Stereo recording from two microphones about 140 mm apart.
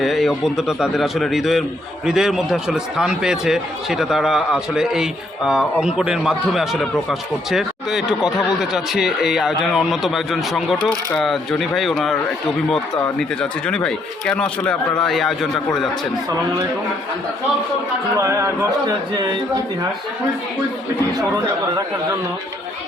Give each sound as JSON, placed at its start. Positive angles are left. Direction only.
{"t": 0.0, "sound": "speech", "side_deg": 0}
{"t": 18.2, "sound": "a man's voice", "side_deg": -20}